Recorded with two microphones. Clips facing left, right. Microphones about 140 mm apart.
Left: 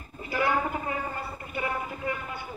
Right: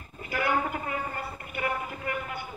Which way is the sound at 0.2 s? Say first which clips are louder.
Left 1 dB; 30° left (ahead or behind).